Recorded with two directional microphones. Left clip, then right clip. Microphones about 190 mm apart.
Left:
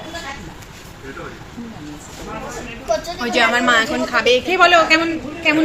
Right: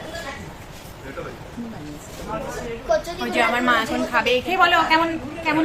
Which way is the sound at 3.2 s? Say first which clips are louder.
Left 6 dB; 15° left (ahead or behind).